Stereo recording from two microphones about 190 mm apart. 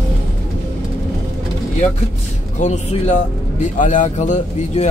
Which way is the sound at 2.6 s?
40° left (ahead or behind).